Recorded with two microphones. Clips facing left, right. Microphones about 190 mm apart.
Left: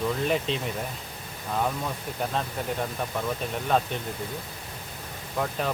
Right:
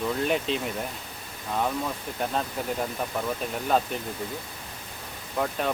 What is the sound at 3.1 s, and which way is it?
Speech, centre (ahead or behind).